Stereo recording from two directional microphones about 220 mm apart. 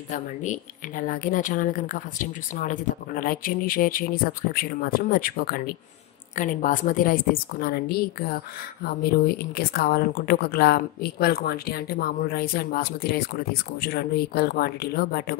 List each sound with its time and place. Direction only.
0.1 s speech: 35° left (ahead or behind)